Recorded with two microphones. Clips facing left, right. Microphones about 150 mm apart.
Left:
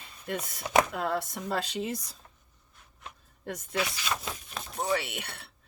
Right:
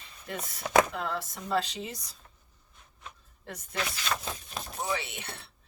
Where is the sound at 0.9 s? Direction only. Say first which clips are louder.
Left 3 dB; 55° left (ahead or behind).